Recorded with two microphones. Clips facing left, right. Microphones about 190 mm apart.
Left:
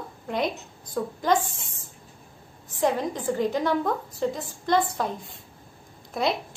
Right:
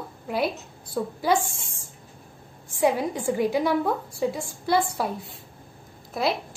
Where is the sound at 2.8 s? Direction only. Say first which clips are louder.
Right 2 dB; 10° right (ahead or behind).